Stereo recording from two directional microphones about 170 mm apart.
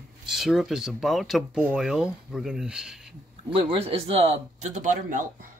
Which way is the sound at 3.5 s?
35° right (ahead or behind).